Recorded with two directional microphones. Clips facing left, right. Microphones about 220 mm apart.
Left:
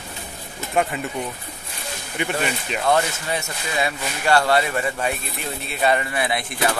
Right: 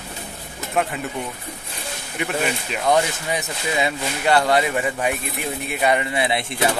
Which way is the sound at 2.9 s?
15° right (ahead or behind).